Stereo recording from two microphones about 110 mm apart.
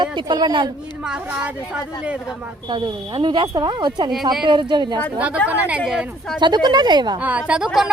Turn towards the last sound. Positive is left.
turn(degrees=-5)  # may be behind; listen again after turning